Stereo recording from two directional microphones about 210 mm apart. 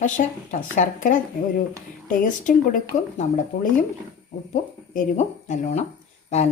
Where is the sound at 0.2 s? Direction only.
40° left (ahead or behind).